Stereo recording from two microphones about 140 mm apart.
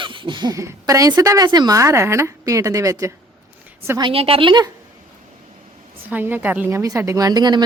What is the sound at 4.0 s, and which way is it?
Speech, 40° right (ahead or behind).